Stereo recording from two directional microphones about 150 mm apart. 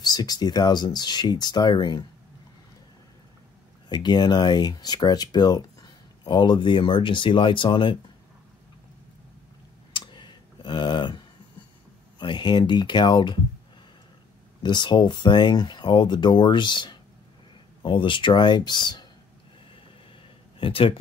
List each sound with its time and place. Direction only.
0.0 s speech: 25° left (ahead or behind)
3.9 s speech: 30° left (ahead or behind)
9.9 s clicking: 30° left (ahead or behind)
12.2 s speech: 30° left (ahead or behind)
14.6 s speech: 30° left (ahead or behind)
20.5 s speech: 35° left (ahead or behind)